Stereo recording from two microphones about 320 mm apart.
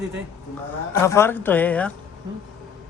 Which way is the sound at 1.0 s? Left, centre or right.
Centre.